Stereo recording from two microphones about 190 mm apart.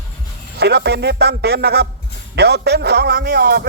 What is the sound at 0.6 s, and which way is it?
A man's voice, 60° right (ahead or behind).